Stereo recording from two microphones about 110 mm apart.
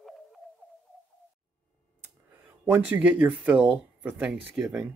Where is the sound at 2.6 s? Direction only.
20° right (ahead or behind).